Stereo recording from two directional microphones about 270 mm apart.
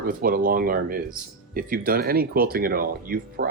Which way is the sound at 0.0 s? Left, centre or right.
Right.